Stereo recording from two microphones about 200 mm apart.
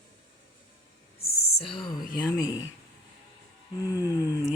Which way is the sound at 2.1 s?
20° left (ahead or behind).